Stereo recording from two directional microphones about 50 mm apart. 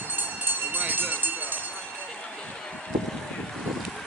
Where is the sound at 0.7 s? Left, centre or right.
Right.